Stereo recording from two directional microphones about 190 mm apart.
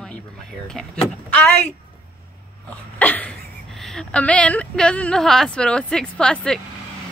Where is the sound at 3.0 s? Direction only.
10° left (ahead or behind).